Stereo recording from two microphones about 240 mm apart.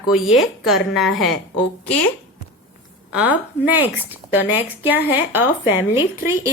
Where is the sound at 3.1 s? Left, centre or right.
Centre.